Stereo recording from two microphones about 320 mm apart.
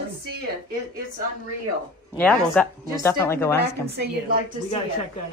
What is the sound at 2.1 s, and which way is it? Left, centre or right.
Speech, centre.